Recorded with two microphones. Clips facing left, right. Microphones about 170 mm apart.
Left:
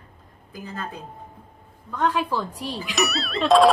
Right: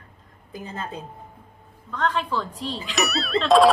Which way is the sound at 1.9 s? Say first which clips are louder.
Left 1 dB; 10° left (ahead or behind).